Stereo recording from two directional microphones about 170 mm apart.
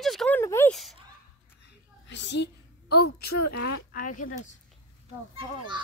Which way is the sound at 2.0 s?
90° left.